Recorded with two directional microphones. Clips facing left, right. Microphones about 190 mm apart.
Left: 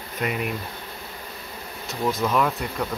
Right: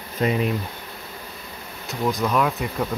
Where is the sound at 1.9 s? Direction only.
Centre (ahead or behind).